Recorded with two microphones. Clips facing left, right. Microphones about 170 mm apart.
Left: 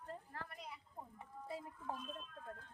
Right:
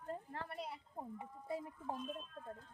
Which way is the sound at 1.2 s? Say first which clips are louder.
Right 3 dB; 20° right (ahead or behind).